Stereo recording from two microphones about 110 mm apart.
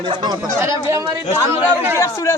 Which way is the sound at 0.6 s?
25° right (ahead or behind).